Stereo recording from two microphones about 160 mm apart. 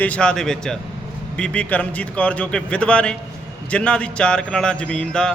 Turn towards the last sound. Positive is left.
turn(degrees=5)  # may be behind; listen again after turning